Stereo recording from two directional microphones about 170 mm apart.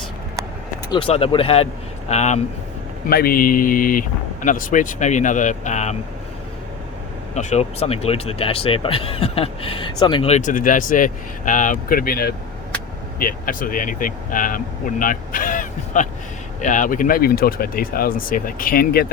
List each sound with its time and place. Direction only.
0.9 s speech: 30° left (ahead or behind)
3.1 s speech: 60° left (ahead or behind); by 6.0 s 45° left (ahead or behind)
7.3 s speech: 40° left (ahead or behind)
10.3 s speech: 50° left (ahead or behind)